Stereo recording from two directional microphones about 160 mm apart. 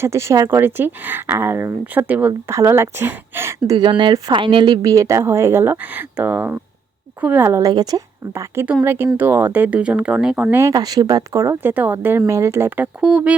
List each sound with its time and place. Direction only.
0.0 s speech: 15° right (ahead or behind)